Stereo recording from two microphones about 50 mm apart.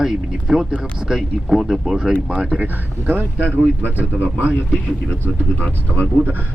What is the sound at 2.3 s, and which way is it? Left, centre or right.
Speech, right.